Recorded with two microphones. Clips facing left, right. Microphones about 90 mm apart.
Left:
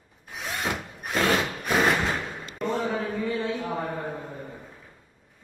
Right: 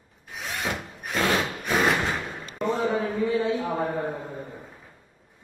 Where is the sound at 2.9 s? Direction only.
15° right (ahead or behind).